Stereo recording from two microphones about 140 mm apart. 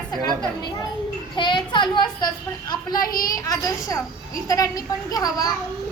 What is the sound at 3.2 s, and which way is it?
A child's voice, 25° left (ahead or behind).